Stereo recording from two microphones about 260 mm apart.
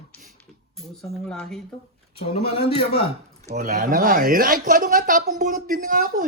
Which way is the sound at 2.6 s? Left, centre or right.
Left.